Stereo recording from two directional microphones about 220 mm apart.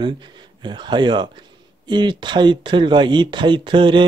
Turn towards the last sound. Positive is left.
turn(degrees=-20)  # may be behind; listen again after turning